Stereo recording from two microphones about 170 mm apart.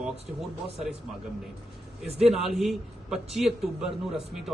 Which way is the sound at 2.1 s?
5° right (ahead or behind).